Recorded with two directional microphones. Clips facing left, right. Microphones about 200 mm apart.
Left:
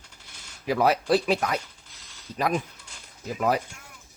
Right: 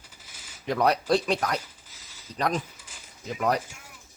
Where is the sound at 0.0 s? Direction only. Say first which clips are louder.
Even; 5° right (ahead or behind).